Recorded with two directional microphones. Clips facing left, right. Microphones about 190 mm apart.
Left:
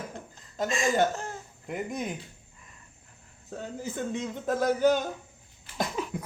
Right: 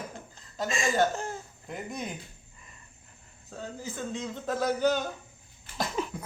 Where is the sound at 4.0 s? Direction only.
20° left (ahead or behind).